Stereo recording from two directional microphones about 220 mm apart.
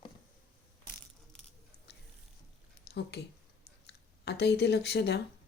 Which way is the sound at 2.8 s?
50° left (ahead or behind).